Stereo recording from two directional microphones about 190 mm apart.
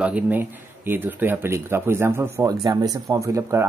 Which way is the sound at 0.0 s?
10° right (ahead or behind).